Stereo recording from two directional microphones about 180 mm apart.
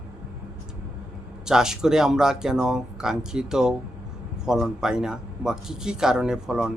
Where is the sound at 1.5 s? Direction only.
5° right (ahead or behind).